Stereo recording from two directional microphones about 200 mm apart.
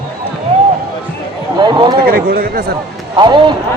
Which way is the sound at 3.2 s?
25° right (ahead or behind).